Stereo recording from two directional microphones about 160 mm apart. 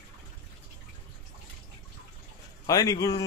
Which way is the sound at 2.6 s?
20° left (ahead or behind).